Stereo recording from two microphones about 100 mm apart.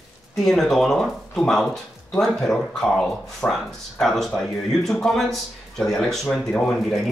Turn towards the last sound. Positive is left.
turn(degrees=0)  # may be behind; listen again after turning